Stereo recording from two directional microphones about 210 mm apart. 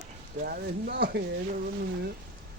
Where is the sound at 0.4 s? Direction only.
50° right (ahead or behind).